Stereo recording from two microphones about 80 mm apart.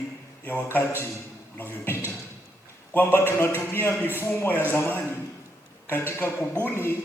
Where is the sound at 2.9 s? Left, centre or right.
Left.